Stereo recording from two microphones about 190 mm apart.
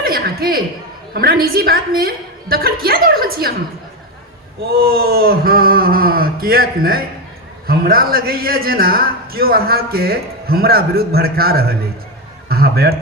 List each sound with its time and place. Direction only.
0.0 s a woman's voice: 50° right (ahead or behind)
4.8 s a man's voice: 50° right (ahead or behind)